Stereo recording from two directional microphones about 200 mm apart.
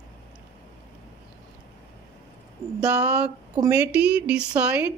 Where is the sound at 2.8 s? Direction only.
5° right (ahead or behind).